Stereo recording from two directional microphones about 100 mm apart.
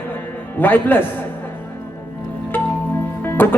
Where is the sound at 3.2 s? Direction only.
20° left (ahead or behind).